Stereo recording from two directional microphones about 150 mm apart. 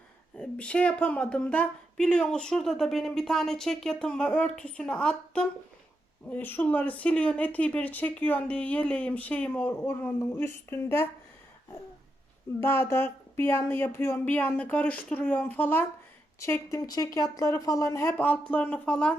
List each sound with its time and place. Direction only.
0.3 s speech: 5° left (ahead or behind)
12.5 s a woman's voice: 15° left (ahead or behind)